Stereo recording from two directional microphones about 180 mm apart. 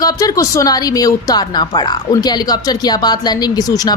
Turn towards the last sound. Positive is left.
turn(degrees=20)  # may be behind; listen again after turning